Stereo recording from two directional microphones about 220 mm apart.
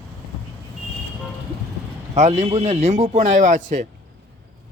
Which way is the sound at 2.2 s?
30° right (ahead or behind).